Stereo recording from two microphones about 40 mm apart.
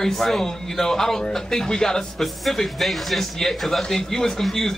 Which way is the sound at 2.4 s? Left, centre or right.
Centre.